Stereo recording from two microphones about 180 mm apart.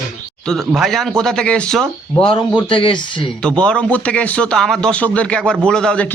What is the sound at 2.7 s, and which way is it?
Speech, 30° left (ahead or behind).